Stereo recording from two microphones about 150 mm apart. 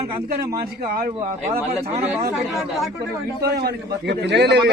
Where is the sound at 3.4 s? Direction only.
90° right.